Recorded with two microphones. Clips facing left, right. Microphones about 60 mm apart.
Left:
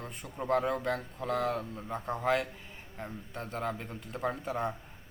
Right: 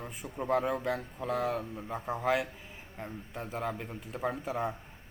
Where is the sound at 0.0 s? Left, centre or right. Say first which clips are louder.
Right 1 dB; centre.